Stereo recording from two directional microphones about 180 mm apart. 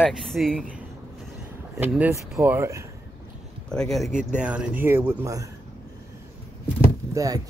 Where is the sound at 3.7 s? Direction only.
Centre (ahead or behind); by 5.5 s 15° right (ahead or behind).